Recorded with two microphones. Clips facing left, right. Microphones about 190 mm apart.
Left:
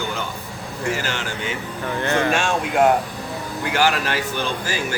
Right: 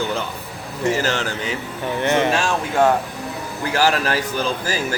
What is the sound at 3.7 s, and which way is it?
Speech, 35° right (ahead or behind).